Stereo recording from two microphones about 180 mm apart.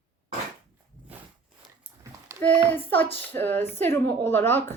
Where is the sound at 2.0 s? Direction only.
15° right (ahead or behind).